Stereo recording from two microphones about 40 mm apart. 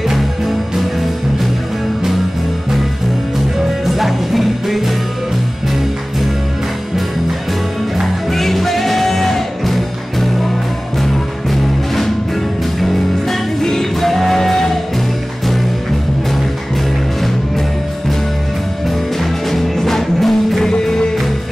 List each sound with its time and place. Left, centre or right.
3.8 s music: centre
8.0 s music: centre
11.5 s music: centre
19.5 s music: centre